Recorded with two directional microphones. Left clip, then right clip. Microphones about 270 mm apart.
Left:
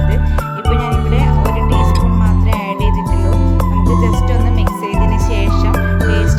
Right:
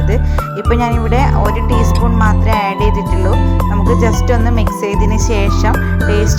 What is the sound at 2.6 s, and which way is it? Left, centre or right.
Music, centre.